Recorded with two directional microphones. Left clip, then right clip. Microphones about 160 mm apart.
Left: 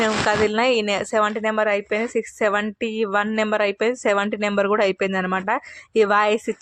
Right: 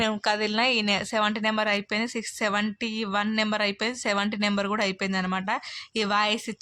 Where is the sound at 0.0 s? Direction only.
20° left (ahead or behind).